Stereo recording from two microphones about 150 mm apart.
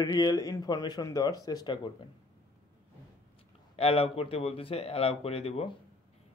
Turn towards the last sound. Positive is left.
turn(degrees=40)  # may be behind; listen again after turning